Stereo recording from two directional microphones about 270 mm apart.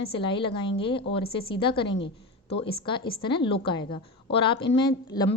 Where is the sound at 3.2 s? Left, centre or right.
Centre.